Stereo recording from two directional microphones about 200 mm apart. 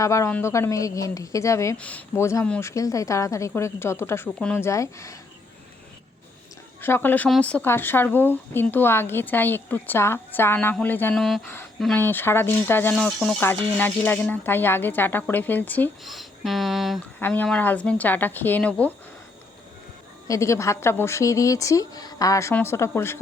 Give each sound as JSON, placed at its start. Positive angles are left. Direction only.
{"t": 0.0, "sound": "speech", "side_deg": 15}
{"t": 6.8, "sound": "speech", "side_deg": 10}
{"t": 17.2, "sound": "speech", "side_deg": 10}
{"t": 20.2, "sound": "speech", "side_deg": 15}